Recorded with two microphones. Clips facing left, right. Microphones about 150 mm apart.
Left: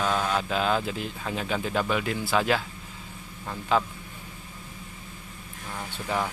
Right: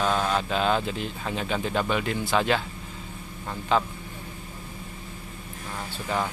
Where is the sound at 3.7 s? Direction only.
5° left (ahead or behind).